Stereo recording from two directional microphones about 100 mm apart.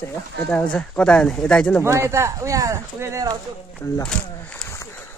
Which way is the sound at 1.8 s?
30° right (ahead or behind).